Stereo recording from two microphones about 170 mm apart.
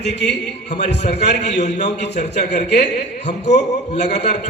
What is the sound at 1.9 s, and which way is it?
Speech, 85° left.